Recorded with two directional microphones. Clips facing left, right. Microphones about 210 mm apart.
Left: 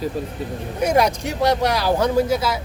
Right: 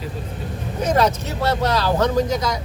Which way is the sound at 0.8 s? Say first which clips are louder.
Left 1 dB; 10° left (ahead or behind).